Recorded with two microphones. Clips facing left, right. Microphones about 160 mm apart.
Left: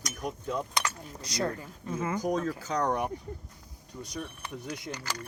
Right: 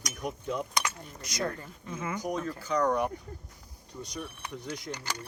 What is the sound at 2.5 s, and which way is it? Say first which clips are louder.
Speech: left 3 dB; 90° left.